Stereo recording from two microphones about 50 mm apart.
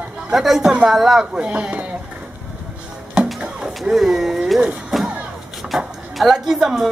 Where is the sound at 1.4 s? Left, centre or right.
Right.